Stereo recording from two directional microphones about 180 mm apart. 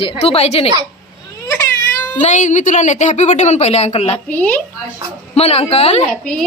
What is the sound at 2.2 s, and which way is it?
A woman's voice, 40° left (ahead or behind).